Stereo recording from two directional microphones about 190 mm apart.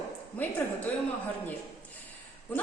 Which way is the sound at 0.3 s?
5° left (ahead or behind).